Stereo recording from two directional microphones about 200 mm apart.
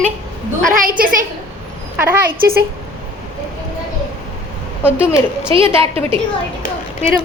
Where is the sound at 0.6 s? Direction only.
45° right (ahead or behind).